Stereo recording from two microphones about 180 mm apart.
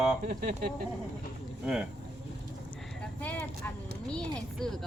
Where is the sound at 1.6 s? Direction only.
5° right (ahead or behind).